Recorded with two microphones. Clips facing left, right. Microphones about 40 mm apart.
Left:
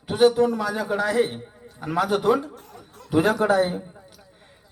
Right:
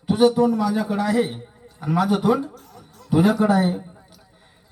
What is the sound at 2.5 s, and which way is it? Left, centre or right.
Chuckle, left.